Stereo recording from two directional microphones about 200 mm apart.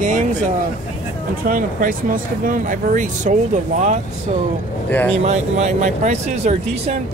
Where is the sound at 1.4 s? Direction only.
45° right (ahead or behind).